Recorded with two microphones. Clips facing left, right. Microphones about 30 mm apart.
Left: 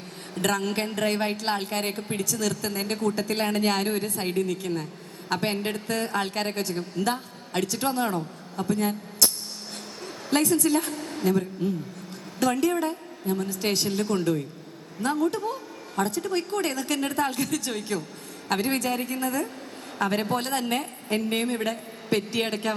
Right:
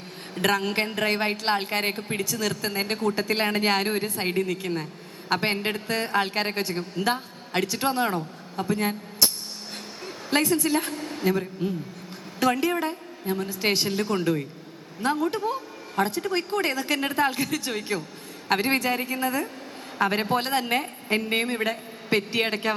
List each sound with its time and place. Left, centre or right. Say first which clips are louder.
0.3 s a woman's voice: right 2 dB; centre